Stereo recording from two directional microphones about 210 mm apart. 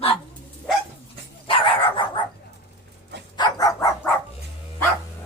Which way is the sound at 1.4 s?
25° left (ahead or behind).